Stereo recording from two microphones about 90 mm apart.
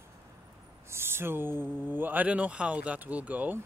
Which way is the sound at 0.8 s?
25° right (ahead or behind).